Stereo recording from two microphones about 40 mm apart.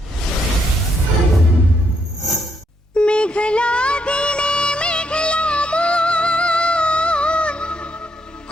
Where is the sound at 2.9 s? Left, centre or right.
Left.